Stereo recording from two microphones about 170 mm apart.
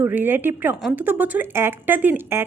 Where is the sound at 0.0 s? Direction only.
10° right (ahead or behind).